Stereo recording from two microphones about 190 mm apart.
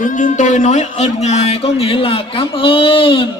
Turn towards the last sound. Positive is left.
turn(degrees=25)  # may be behind; listen again after turning